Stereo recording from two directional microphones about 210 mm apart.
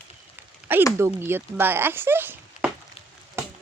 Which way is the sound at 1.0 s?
10° right (ahead or behind).